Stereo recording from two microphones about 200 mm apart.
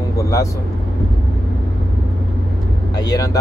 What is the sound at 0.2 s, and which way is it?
Speech, 15° left (ahead or behind).